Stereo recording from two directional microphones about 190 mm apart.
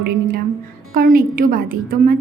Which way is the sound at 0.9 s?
50° right (ahead or behind).